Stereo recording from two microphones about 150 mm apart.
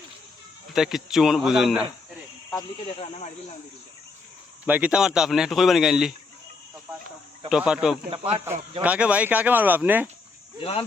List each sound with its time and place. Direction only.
0.7 s speech: centre (ahead or behind)
2.7 s speech: 40° left (ahead or behind)
4.6 s speech: 10° right (ahead or behind)
7.5 s speech: 5° right (ahead or behind)
8.1 s speech: 35° right (ahead or behind)
8.8 s speech: 10° right (ahead or behind)
10.6 s speech: 40° left (ahead or behind)